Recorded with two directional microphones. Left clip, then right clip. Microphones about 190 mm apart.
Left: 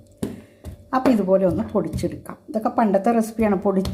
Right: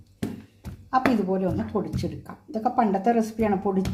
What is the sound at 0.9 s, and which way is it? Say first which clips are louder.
Speech: left 5 dB; 20° left (ahead or behind).